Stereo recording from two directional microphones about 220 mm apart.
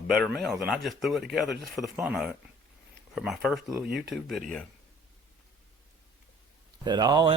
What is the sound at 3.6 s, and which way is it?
Speech, 15° right (ahead or behind).